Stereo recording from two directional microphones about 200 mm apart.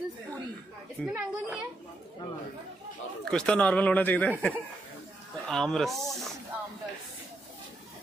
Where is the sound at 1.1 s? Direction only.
10° right (ahead or behind).